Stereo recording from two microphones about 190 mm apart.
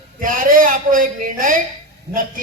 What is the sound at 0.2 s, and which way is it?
A man's voice, 45° right (ahead or behind).